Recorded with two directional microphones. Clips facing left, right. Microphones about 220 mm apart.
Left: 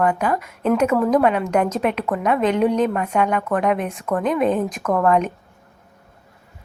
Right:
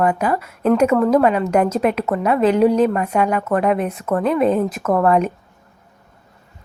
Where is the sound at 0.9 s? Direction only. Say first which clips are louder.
Right 3 dB; 5° left (ahead or behind).